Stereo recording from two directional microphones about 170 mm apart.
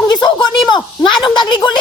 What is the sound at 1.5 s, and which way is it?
Speech, 25° left (ahead or behind).